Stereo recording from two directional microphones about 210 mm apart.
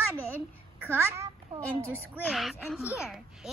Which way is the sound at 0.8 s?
15° right (ahead or behind).